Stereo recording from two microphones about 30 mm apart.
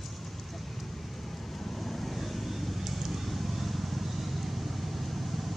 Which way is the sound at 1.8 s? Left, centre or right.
Centre.